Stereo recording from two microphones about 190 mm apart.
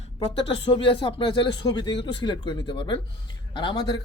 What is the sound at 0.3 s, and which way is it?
Speech, 30° left (ahead or behind).